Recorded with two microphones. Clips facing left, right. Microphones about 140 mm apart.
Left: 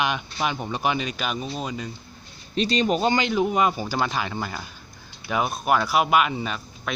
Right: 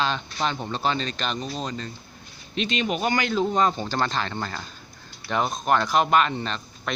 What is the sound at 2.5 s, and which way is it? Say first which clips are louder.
Speech: left 4 dB; 35° left (ahead or behind).